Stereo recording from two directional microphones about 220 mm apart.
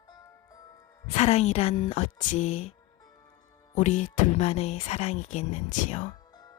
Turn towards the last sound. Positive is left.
turn(degrees=35)  # may be behind; listen again after turning